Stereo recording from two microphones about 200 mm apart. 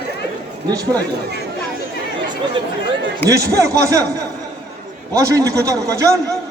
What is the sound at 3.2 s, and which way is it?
A man's voice, 15° right (ahead or behind).